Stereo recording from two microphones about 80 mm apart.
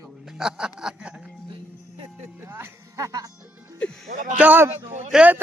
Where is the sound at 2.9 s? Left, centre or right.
Right.